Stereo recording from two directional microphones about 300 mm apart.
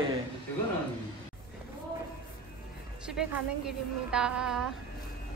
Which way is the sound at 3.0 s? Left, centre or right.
Centre.